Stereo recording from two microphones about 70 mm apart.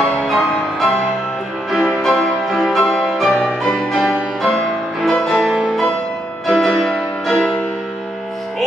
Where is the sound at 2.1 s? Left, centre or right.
Centre.